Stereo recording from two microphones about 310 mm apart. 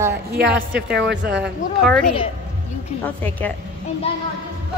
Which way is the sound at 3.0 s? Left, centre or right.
Centre.